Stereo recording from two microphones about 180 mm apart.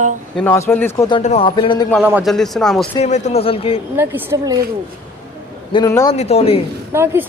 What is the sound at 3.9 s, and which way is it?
Speech, 10° right (ahead or behind).